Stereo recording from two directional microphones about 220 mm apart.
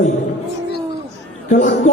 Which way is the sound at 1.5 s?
35° left (ahead or behind).